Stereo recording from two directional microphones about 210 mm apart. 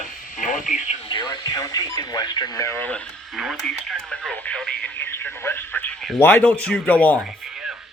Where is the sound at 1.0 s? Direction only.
20° left (ahead or behind); by 7.9 s centre (ahead or behind).